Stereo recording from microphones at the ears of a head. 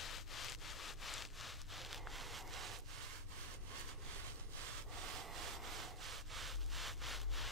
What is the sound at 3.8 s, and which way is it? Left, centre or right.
Rub, right.